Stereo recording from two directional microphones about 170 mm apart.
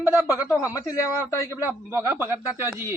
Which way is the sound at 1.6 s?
15° right (ahead or behind).